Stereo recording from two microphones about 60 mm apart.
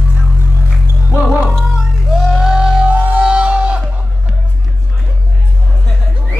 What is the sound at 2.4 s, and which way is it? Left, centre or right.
Music, centre.